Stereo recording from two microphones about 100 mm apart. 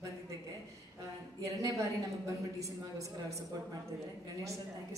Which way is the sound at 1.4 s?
35° right (ahead or behind).